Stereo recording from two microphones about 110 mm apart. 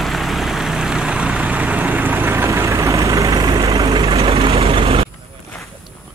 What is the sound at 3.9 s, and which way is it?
Vehicle, 55° right (ahead or behind).